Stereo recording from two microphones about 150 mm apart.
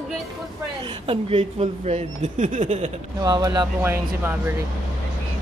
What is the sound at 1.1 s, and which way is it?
Speech, 40° right (ahead or behind).